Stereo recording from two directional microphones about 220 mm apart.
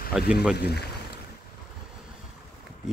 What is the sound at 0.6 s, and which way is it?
Speech, 50° left (ahead or behind).